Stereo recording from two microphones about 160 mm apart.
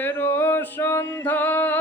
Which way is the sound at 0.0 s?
10° left (ahead or behind).